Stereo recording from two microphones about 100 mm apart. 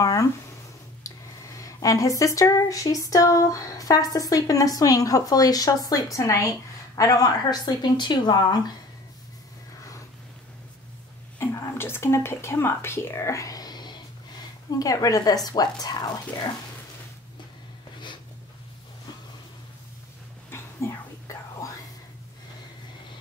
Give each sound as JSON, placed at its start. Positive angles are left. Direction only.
{"t": 0.0, "sound": "a sound", "side_deg": 35}
{"t": 1.0, "sound": "speech", "side_deg": 35}
{"t": 11.3, "sound": "a woman's voice", "side_deg": 25}
{"t": 20.4, "sound": "whispering", "side_deg": 25}